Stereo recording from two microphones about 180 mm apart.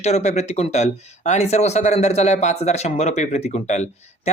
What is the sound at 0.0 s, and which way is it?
Speech, 40° left (ahead or behind).